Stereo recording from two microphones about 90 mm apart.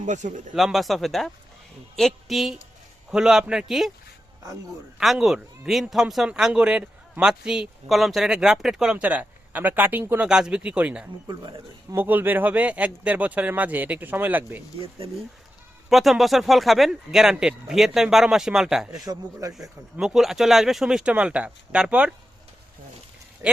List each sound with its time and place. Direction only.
0.5 s speech: centre (ahead or behind)
4.9 s speech: 5° right (ahead or behind); by 10.2 s 25° right (ahead or behind)
10.2 s speech: 10° right (ahead or behind)
11.3 s speech: 50° right (ahead or behind)
11.9 s speech: 20° right (ahead or behind)
14.8 s speech: 90° right
15.9 s speech: centre (ahead or behind)
19.0 s speech: 40° right (ahead or behind)
20.0 s speech: 5° right (ahead or behind)
23.4 s speech: 30° right (ahead or behind)